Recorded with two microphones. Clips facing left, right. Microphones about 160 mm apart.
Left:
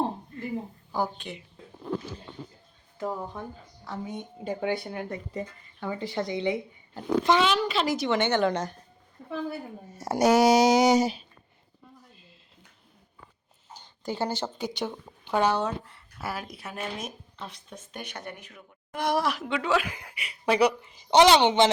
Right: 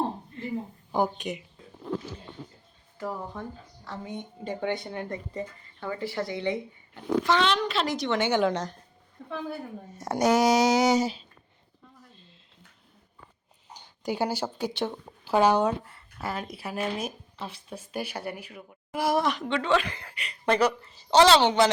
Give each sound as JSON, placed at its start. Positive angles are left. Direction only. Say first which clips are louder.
{"t": 0.3, "sound": "a sound", "louder": "left 1 dB", "side_deg": -25}
{"t": 0.9, "sound": "speech", "louder": "right 3 dB", "side_deg": -20}
{"t": 3.0, "sound": "speech", "louder": "left 2 dB", "side_deg": 20}
{"t": 4.4, "sound": "speech", "louder": "left 1 dB", "side_deg": 5}
{"t": 10.0, "sound": "speech", "louder": "left 2 dB", "side_deg": 10}
{"t": 13.7, "sound": "speech", "louder": "right 2 dB", "side_deg": -15}
{"t": 16.2, "sound": "speech", "louder": "right 2 dB", "side_deg": 5}